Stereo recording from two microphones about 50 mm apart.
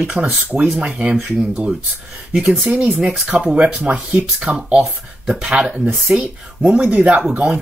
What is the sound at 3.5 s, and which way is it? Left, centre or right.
Speech, centre.